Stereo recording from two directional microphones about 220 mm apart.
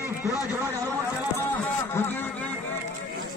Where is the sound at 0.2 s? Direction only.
15° left (ahead or behind).